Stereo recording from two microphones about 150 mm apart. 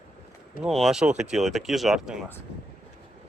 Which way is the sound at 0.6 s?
Centre (ahead or behind).